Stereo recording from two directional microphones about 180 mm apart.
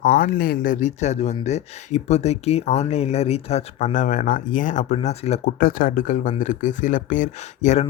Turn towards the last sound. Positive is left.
turn(degrees=40)  # may be behind; listen again after turning